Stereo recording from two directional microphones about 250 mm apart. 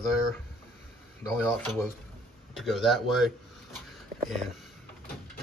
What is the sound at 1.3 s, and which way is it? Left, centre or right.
Speech, centre.